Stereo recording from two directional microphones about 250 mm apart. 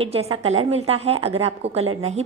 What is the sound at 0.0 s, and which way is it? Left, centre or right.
A woman's voice, right.